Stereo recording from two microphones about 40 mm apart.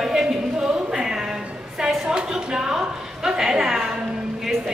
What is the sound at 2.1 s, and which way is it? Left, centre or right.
A woman's voice, centre.